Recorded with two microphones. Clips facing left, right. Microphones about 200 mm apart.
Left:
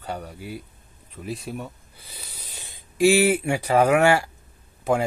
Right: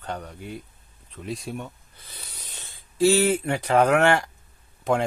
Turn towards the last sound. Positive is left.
turn(degrees=5)  # may be behind; listen again after turning